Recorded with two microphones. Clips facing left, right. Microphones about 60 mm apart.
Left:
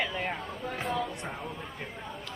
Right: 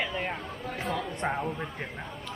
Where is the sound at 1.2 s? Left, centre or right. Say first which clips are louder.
Right 9 dB; right.